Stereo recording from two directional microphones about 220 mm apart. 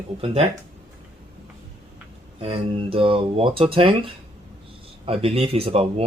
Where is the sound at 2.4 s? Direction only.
25° right (ahead or behind).